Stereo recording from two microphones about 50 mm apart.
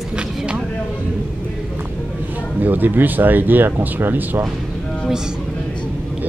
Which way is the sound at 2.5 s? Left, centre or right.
Right.